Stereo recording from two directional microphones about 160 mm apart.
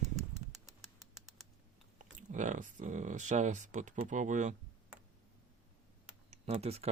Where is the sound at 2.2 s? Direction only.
50° right (ahead or behind).